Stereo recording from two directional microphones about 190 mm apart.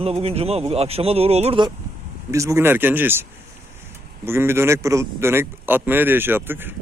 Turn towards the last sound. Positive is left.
turn(degrees=-10)  # may be behind; listen again after turning